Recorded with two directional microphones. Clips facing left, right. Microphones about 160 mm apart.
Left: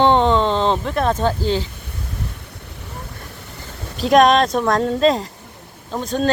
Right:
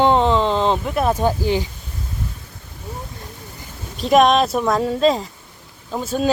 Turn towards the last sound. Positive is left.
turn(degrees=-5)  # may be behind; listen again after turning